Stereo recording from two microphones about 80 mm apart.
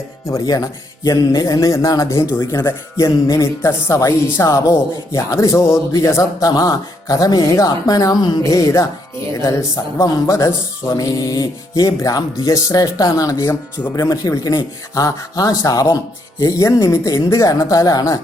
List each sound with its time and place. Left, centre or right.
0.6 s music: left
2.6 s speech: left
6.6 s music: left
8.4 s music: left
13.5 s speech: left
13.9 s music: left